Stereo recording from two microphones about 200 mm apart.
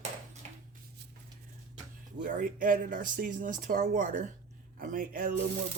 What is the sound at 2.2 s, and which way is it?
Speech, 45° right (ahead or behind).